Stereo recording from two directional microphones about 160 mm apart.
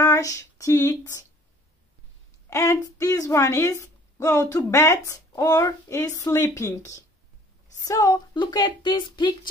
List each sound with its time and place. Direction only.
0.0 s speech: 20° left (ahead or behind)
2.5 s a woman's voice: 20° left (ahead or behind)